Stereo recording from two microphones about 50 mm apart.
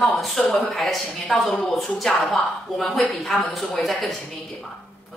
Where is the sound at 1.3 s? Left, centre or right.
Centre.